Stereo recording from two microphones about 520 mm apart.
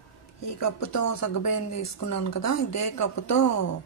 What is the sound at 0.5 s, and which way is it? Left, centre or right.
Speech, left.